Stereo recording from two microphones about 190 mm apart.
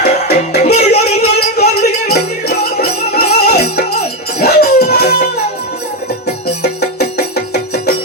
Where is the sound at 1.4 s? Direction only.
55° left (ahead or behind).